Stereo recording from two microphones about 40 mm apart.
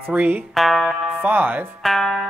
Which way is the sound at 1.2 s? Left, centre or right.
Right.